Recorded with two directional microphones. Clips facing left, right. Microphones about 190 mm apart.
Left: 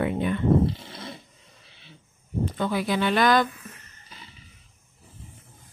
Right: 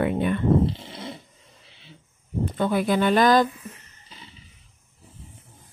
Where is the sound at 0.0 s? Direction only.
55° right (ahead or behind).